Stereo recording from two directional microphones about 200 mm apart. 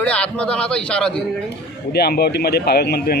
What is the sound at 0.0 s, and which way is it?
A man's voice, 5° left (ahead or behind).